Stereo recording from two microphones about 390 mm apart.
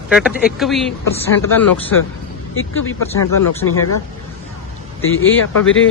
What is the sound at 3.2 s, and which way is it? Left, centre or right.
Speech, left.